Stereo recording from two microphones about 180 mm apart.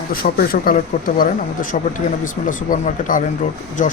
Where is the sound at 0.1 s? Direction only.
55° left (ahead or behind).